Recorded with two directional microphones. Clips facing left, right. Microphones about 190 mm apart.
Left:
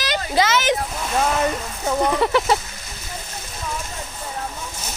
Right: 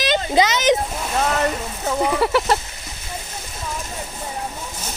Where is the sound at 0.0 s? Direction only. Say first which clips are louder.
Right 3 dB; 20° right (ahead or behind).